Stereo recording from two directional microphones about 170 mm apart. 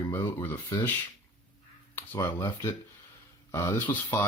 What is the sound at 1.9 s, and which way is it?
Speech, 10° left (ahead or behind).